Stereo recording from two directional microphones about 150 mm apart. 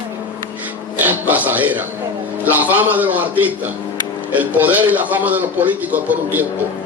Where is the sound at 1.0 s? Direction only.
10° right (ahead or behind).